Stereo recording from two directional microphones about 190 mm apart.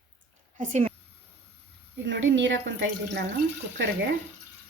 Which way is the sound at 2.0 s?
70° right (ahead or behind).